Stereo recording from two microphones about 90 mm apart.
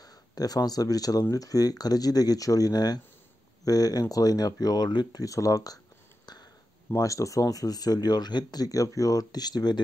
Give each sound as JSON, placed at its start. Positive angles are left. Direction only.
{"t": 0.0, "sound": "speech", "side_deg": 45}
{"t": 7.0, "sound": "speech", "side_deg": 35}